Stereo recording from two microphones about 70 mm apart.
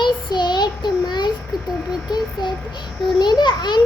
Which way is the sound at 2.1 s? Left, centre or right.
Left.